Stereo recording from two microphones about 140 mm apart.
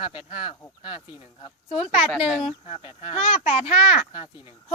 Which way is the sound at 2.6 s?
40° left (ahead or behind).